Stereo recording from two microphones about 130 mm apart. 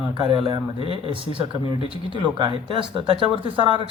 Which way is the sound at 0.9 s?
45° right (ahead or behind).